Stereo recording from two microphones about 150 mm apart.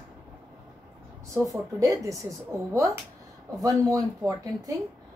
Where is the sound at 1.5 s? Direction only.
20° right (ahead or behind).